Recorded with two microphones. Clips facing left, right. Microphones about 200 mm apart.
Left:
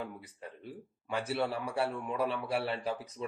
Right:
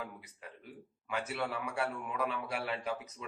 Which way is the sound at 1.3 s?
30° left (ahead or behind).